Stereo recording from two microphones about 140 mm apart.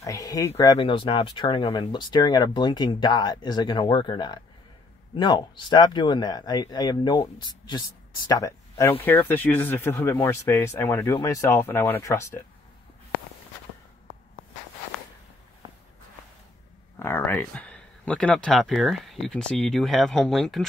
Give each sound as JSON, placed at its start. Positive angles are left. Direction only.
{"t": 0.0, "sound": "speech", "side_deg": 25}
{"t": 0.7, "sound": "speech", "side_deg": 40}
{"t": 17.0, "sound": "speech", "side_deg": 15}